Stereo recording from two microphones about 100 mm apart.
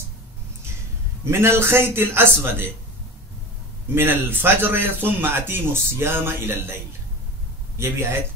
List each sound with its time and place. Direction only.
1.2 s speech: 25° right (ahead or behind)
3.9 s speech: 20° right (ahead or behind)